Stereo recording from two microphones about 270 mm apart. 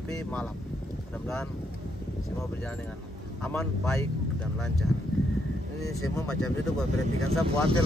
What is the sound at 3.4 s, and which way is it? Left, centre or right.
Speech, centre.